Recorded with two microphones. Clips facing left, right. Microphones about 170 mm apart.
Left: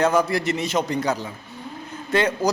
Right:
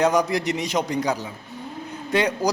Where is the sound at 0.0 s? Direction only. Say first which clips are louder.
Even; 15° right (ahead or behind).